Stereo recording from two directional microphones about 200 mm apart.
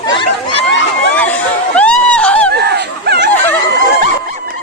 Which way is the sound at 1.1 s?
5° left (ahead or behind).